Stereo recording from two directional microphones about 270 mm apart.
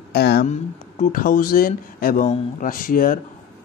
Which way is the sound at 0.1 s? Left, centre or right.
Left.